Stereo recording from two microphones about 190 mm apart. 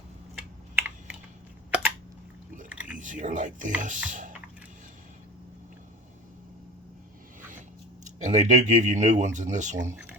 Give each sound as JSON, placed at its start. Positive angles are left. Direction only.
{"t": 0.8, "sound": "typing", "side_deg": -10}
{"t": 2.6, "sound": "chewing", "side_deg": -10}
{"t": 3.0, "sound": "speech", "side_deg": -40}
{"t": 8.0, "sound": "speech", "side_deg": -40}